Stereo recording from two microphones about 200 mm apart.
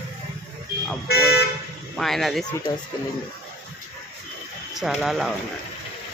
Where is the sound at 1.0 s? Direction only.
50° left (ahead or behind).